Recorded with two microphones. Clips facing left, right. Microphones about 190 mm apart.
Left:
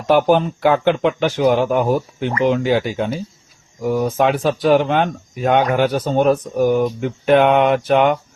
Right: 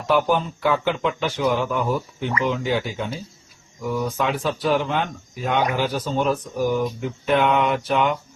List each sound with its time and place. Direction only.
0.1 s speech: 65° left (ahead or behind); by 2.5 s 50° left (ahead or behind)
2.5 s speech: 70° left (ahead or behind)
3.8 s speech: 50° left (ahead or behind)